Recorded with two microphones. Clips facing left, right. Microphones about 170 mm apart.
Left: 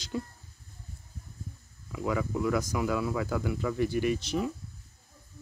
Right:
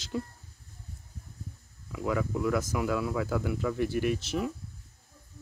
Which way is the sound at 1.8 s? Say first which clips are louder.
Even; centre (ahead or behind).